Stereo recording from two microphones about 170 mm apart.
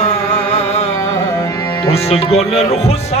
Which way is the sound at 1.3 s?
20° left (ahead or behind).